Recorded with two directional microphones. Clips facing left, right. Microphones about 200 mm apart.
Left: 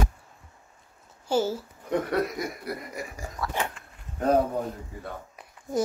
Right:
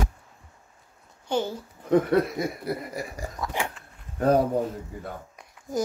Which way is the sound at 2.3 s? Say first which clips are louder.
Right 4 dB; 30° right (ahead or behind).